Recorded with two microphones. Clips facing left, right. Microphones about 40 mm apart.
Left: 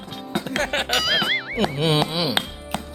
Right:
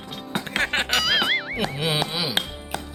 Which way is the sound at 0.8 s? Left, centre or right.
Centre.